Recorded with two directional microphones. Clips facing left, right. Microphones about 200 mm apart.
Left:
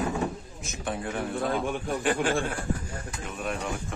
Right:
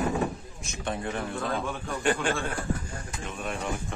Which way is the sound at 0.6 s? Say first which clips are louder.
Even; 5° left (ahead or behind).